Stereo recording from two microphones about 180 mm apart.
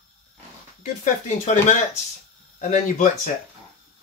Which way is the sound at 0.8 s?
40° left (ahead or behind).